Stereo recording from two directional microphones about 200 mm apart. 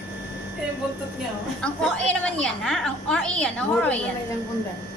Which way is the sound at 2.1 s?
5° left (ahead or behind).